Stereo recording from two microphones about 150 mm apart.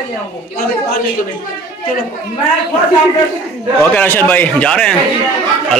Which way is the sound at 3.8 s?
10° left (ahead or behind).